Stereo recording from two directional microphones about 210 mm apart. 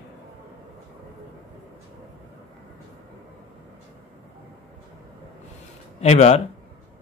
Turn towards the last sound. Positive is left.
turn(degrees=30)  # may be behind; listen again after turning